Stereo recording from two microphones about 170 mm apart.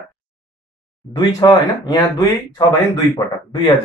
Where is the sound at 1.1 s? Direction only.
25° left (ahead or behind).